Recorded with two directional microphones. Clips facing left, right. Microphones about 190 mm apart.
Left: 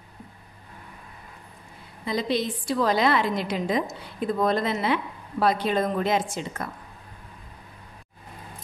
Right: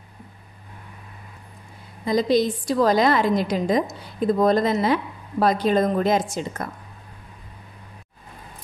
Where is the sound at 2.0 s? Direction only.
40° right (ahead or behind).